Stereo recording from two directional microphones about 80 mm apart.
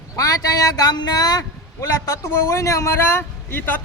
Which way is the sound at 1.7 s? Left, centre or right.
Left.